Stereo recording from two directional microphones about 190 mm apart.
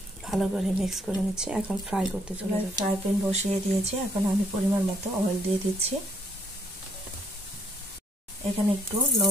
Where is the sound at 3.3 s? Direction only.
35° right (ahead or behind).